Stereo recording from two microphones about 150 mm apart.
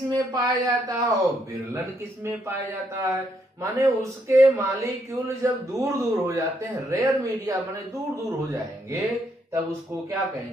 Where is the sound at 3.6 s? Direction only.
20° right (ahead or behind).